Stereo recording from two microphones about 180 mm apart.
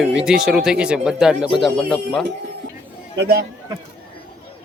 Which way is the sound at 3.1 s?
70° right (ahead or behind).